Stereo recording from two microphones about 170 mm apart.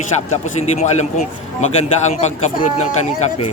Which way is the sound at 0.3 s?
40° left (ahead or behind).